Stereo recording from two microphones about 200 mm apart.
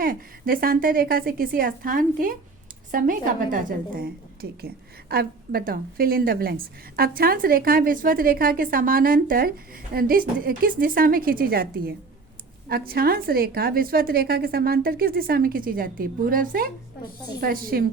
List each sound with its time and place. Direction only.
0.0 s a woman's voice: 45° right (ahead or behind)